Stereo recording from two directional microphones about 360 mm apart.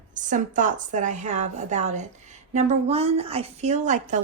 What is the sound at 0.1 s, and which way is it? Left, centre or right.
A woman's voice, right.